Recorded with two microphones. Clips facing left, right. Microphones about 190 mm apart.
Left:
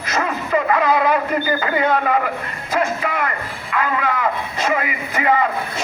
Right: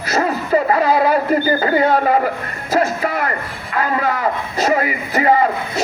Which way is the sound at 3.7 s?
40° right (ahead or behind).